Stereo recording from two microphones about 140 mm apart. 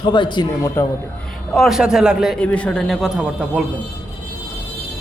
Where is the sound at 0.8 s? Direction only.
15° left (ahead or behind).